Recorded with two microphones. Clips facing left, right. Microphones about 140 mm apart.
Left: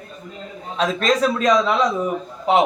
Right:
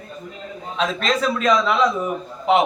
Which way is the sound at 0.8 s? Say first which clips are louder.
Left 3 dB; 40° left (ahead or behind).